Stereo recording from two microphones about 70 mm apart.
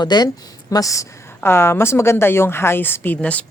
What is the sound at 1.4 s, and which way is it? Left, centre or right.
Speech, left.